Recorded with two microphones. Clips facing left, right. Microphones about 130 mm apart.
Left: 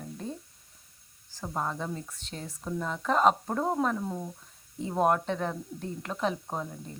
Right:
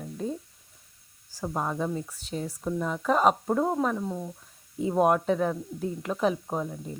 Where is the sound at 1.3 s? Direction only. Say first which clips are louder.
Right 3 dB; 10° right (ahead or behind).